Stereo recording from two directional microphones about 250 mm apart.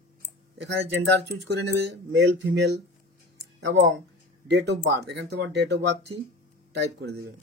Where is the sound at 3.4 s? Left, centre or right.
Right.